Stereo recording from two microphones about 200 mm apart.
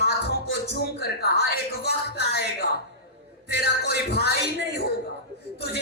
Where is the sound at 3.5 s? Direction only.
55° left (ahead or behind).